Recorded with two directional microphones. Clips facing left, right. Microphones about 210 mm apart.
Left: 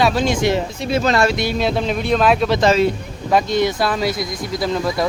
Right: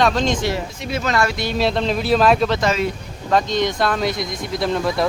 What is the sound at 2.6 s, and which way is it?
Speech, 30° left (ahead or behind).